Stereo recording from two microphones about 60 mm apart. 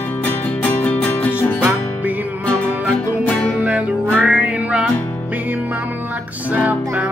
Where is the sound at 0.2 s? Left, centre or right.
Left.